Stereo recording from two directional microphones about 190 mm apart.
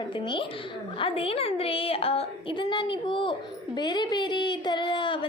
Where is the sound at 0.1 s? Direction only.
25° left (ahead or behind).